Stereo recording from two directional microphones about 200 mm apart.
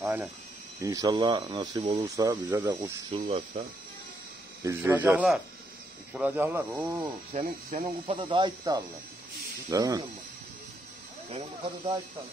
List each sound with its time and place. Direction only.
0.0 s speech: 10° right (ahead or behind)
3.3 s speech: 30° right (ahead or behind)
4.6 s speech: 10° right (ahead or behind)
7.3 s speech: 30° right (ahead or behind)
11.2 s speech: 25° right (ahead or behind)